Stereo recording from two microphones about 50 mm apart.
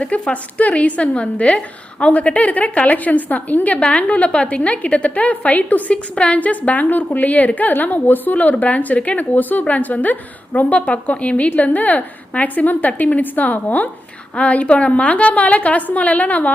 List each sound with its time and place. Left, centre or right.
0.0 s a woman's voice: left
14.3 s a woman's voice: left